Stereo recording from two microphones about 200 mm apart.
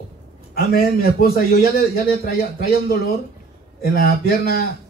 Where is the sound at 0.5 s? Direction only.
50° left (ahead or behind).